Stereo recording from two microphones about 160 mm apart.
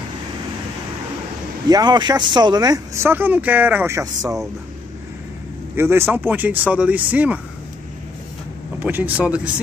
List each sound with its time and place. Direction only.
1.7 s speech: 25° right (ahead or behind)
5.8 s speech: 15° right (ahead or behind)
8.7 s speech: 10° right (ahead or behind)